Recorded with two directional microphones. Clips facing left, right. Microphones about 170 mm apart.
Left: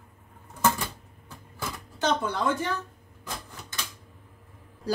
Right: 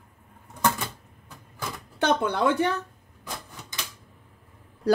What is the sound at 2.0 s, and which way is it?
Speech, 60° right (ahead or behind).